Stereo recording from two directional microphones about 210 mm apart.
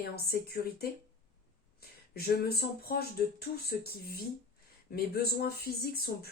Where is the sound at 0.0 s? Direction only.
50° left (ahead or behind).